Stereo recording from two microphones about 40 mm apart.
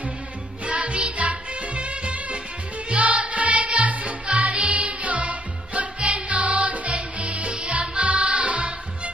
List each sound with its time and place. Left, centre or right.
0.7 s music: right